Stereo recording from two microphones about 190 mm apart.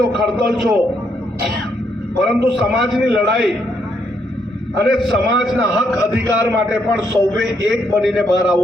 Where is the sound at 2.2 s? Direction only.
Centre (ahead or behind).